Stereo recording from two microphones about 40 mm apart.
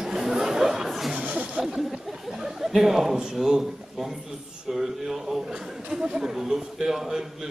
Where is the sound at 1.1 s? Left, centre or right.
Right.